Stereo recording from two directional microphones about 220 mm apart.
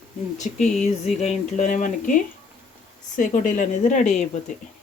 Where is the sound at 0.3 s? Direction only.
30° left (ahead or behind).